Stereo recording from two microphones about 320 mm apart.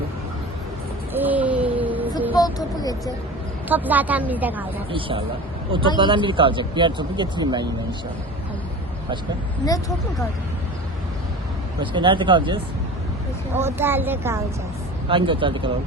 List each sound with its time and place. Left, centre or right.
1.1 s a sound: centre
2.3 s a sound: centre
3.7 s a woman's voice: centre
4.9 s speech: centre
11.8 s speech: centre
13.6 s speech: centre